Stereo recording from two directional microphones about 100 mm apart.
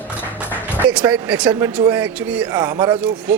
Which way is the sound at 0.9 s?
15° right (ahead or behind).